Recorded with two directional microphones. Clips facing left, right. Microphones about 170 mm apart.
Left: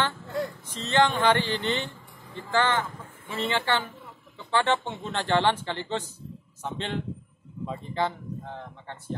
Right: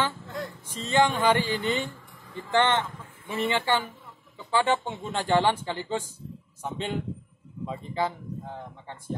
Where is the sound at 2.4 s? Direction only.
20° right (ahead or behind).